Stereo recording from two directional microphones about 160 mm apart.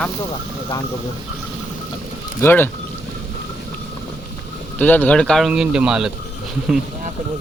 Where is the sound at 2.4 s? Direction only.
10° left (ahead or behind).